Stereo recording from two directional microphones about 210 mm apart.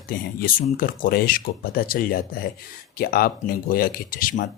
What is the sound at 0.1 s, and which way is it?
Speech, 40° left (ahead or behind).